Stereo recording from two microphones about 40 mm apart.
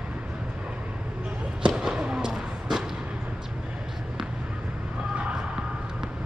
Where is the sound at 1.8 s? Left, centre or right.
Centre.